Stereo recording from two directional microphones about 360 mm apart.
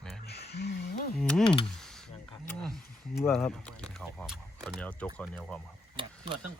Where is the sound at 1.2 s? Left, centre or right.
Centre.